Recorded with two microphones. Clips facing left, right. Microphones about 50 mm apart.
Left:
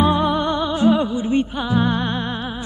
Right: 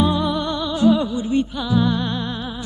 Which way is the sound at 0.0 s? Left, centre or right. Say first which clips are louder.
Left 2 dB; left.